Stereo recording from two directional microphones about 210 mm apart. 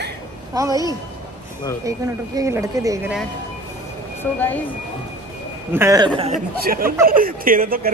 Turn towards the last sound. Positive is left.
turn(degrees=-45)  # may be behind; listen again after turning